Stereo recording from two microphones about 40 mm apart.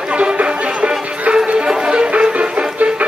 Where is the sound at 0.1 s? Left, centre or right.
Right.